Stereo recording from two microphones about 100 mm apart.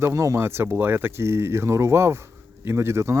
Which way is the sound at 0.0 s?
30° right (ahead or behind).